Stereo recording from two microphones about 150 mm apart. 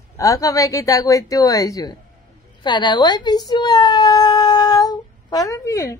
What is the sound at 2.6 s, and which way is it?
Baby cry, 30° left (ahead or behind).